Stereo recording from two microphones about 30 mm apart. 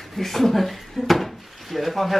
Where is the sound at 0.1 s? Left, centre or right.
Centre.